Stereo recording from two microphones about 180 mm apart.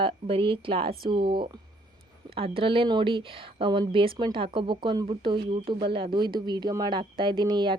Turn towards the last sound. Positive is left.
turn(degrees=-25)  # may be behind; listen again after turning